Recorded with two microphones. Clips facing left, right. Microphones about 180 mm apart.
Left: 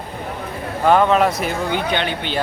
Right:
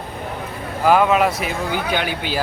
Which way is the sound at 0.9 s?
5° right (ahead or behind).